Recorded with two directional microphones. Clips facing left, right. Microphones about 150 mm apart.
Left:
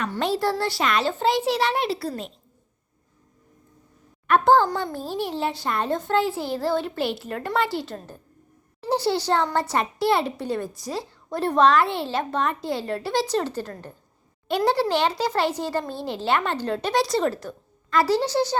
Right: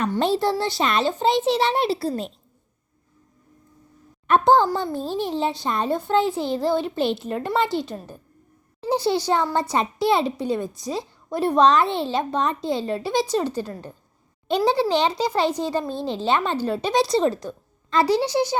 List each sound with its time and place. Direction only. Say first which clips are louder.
0.2 s a child's voice: right 1 dB; 25° right (ahead or behind)
4.3 s a child's voice: right 1 dB; 20° right (ahead or behind)